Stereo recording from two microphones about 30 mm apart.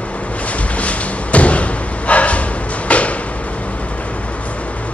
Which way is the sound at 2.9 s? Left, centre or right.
Left.